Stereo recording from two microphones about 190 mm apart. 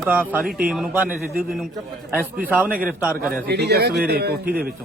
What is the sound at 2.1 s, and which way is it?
A man's voice, 5° right (ahead or behind).